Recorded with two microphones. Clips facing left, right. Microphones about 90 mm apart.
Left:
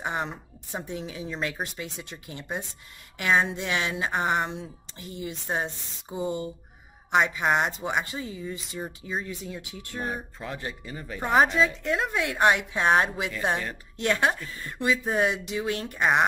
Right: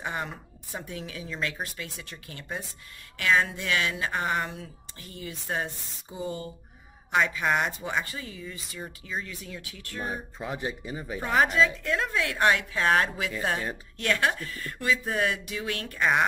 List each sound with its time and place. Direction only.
0.0 s speech: 20° left (ahead or behind)
10.4 s speech: 15° right (ahead or behind)
11.2 s speech: 20° left (ahead or behind)